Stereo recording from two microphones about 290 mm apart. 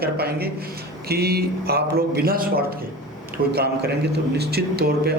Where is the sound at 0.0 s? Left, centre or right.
Right.